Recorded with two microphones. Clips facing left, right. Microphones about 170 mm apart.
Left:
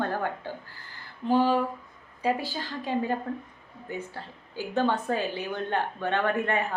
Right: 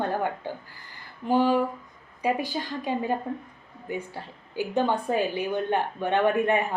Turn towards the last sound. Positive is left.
turn(degrees=-15)  # may be behind; listen again after turning